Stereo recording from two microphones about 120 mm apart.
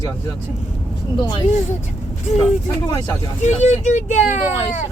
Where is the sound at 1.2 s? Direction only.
40° left (ahead or behind).